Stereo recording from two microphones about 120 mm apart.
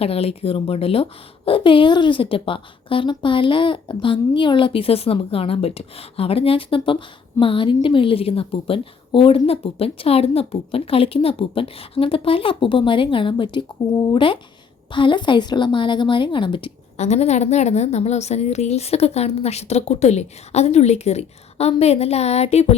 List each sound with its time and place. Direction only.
0.0 s a woman's voice: 55° left (ahead or behind)
17.0 s a woman's voice: 70° left (ahead or behind)